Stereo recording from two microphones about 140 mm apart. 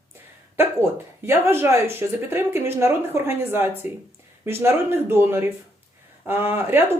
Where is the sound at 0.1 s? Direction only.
15° right (ahead or behind).